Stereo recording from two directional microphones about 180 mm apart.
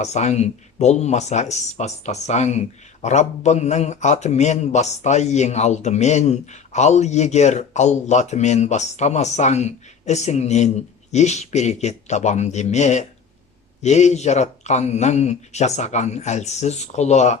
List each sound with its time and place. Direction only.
0.0 s speech: 40° left (ahead or behind)